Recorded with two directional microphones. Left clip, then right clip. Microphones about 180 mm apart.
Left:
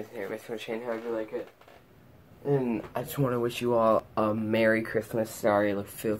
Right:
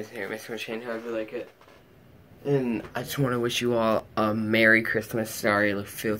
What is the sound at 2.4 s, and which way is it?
Speech, 15° right (ahead or behind).